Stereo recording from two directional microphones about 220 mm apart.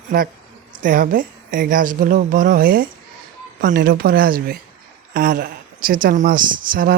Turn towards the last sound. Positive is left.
turn(degrees=-40)  # may be behind; listen again after turning